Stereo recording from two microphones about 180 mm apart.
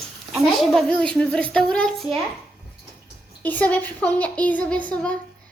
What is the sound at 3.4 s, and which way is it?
Speech, 10° left (ahead or behind).